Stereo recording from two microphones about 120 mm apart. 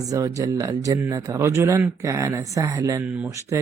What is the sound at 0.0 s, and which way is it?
Speech, 30° right (ahead or behind).